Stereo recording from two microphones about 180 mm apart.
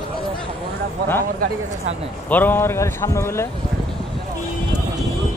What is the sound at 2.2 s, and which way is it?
A man's voice, 10° left (ahead or behind).